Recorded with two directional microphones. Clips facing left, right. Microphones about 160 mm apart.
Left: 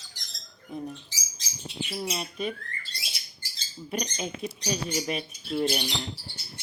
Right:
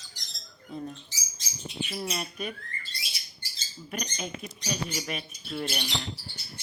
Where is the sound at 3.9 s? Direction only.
30° left (ahead or behind).